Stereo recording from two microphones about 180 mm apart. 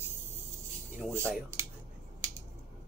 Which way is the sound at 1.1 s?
15° right (ahead or behind).